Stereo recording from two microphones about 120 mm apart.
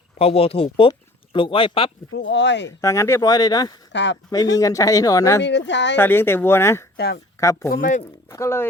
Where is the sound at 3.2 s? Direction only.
35° left (ahead or behind).